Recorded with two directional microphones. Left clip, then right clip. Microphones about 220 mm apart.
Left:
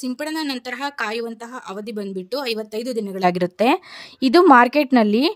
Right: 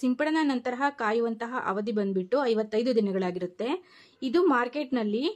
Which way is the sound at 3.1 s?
40° left (ahead or behind).